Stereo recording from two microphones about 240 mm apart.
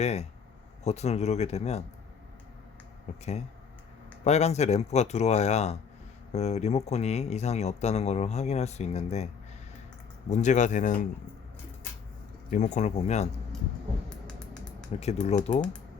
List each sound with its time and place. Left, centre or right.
0.0 s speech: left
3.1 s speech: left
12.5 s speech: left
14.1 s finger snapping: centre
15.0 s speech: left